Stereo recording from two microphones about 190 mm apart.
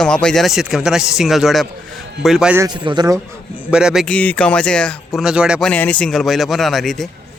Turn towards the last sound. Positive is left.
turn(degrees=0)  # may be behind; listen again after turning